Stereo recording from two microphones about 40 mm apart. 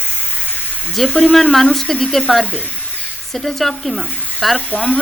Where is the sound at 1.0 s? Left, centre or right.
Centre.